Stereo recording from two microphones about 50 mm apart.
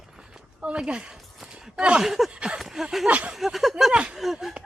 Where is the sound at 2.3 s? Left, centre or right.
Right.